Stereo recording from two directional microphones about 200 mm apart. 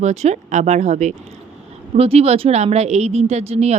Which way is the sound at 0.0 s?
35° right (ahead or behind).